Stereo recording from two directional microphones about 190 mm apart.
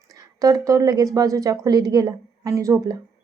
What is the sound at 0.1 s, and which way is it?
A woman's voice, 20° right (ahead or behind).